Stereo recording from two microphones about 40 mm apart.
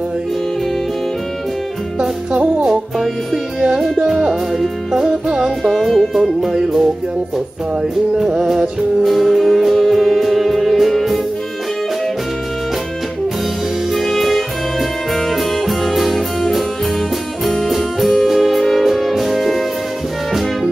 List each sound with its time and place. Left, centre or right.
2.0 s music: centre
4.3 s music: centre
5.8 s music: centre
8.2 s music: centre
9.0 s music: centre
13.9 s music: centre